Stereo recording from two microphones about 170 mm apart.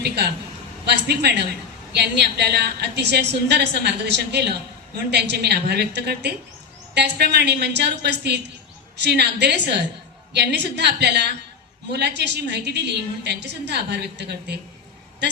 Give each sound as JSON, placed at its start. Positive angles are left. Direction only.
{"t": 0.9, "sound": "a woman's voice", "side_deg": -80}